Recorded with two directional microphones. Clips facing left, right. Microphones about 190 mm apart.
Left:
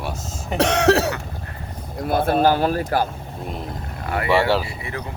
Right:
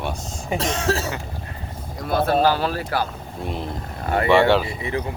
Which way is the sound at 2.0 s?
50° left (ahead or behind).